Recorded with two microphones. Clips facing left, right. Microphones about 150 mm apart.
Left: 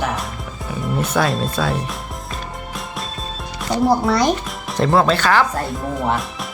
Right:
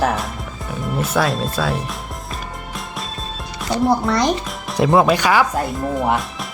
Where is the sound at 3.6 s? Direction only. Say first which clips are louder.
Left 1 dB; centre (ahead or behind).